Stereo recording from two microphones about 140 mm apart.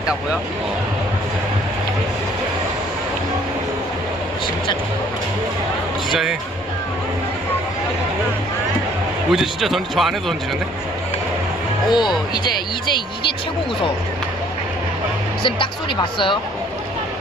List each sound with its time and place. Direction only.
6.1 s speech: centre (ahead or behind)
9.3 s speech: centre (ahead or behind)
11.9 s speech: 30° left (ahead or behind)
15.4 s speech: 35° left (ahead or behind)